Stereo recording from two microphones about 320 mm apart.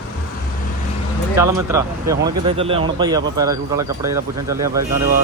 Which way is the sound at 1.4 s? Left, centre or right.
Centre.